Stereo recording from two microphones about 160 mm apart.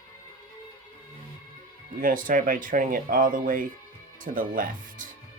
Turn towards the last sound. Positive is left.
turn(degrees=-60)  # may be behind; listen again after turning